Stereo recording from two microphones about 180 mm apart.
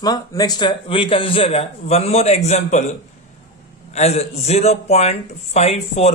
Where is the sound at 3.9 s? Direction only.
35° left (ahead or behind).